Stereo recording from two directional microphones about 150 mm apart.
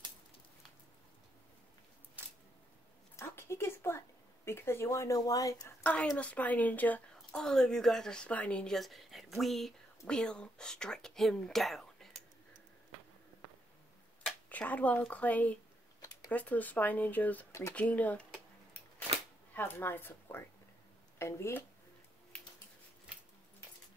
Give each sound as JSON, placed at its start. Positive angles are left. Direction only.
{"t": 3.2, "sound": "a sound", "side_deg": 15}
{"t": 4.5, "sound": "speech", "side_deg": 15}
{"t": 5.9, "sound": "a woman's voice", "side_deg": 10}
{"t": 14.2, "sound": "speech", "side_deg": 10}
{"t": 19.5, "sound": "a woman's voice", "side_deg": 15}